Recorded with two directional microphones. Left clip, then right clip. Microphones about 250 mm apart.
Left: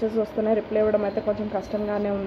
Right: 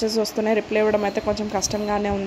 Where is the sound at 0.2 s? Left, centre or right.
Right.